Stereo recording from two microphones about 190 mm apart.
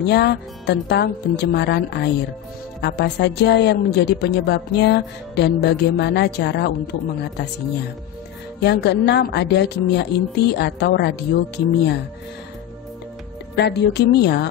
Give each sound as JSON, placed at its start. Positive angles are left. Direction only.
{"t": 0.0, "sound": "a woman's voice", "side_deg": 60}
{"t": 8.5, "sound": "a woman's voice", "side_deg": 60}
{"t": 13.6, "sound": "a woman's voice", "side_deg": 65}